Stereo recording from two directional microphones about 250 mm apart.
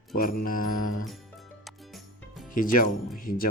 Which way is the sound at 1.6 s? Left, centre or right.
Centre.